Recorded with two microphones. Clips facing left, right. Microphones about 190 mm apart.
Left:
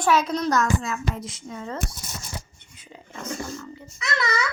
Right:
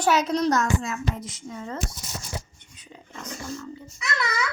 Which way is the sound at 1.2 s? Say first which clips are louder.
Left 2 dB; 40° right (ahead or behind).